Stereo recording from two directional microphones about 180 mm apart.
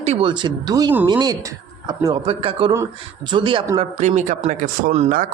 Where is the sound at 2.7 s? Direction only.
15° right (ahead or behind).